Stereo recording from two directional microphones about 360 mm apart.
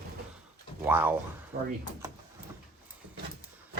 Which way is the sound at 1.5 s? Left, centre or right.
Right.